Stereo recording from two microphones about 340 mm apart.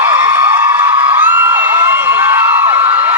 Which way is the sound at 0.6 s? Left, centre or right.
Centre.